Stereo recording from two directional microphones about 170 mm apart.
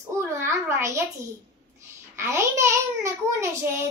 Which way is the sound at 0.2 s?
15° right (ahead or behind).